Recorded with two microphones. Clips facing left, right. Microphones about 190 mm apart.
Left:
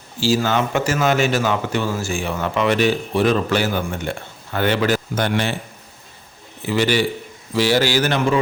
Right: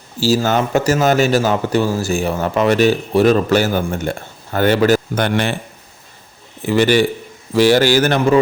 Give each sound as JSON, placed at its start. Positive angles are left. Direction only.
{"t": 0.2, "sound": "speech", "side_deg": -40}
{"t": 5.1, "sound": "speech", "side_deg": -60}
{"t": 6.7, "sound": "a man's voice", "side_deg": -50}